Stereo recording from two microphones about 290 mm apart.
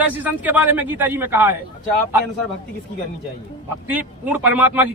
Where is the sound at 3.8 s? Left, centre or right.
Centre.